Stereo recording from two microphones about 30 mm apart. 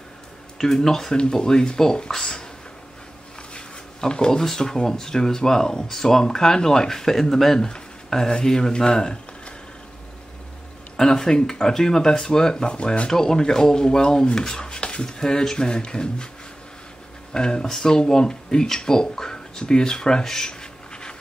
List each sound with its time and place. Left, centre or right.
0.6 s speech: centre
3.5 s a sound: left
4.4 s speech: centre
8.1 s speech: left
11.0 s speech: left
12.6 s speech: left
13.1 s speech: centre
17.3 s speech: left